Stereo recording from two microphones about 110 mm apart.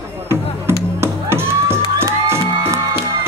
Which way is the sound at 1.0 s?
20° right (ahead or behind).